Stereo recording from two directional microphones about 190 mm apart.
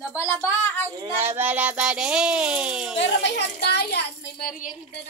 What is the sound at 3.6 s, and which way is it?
A child's voice, 55° left (ahead or behind).